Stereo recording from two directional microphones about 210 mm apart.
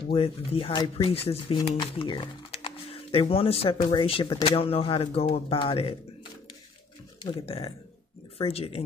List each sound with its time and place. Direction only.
0.1 s speech: 25° left (ahead or behind)
7.4 s speech: 25° left (ahead or behind)